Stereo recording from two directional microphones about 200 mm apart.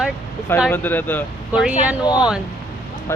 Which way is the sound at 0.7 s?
10° left (ahead or behind).